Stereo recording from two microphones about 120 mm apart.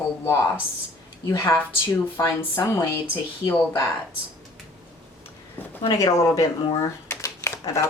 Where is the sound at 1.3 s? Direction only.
25° left (ahead or behind).